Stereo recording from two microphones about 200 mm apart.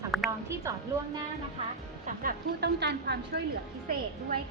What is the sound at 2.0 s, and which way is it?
A woman's voice, 45° right (ahead or behind).